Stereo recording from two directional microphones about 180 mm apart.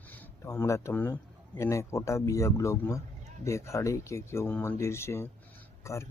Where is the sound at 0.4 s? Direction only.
15° left (ahead or behind).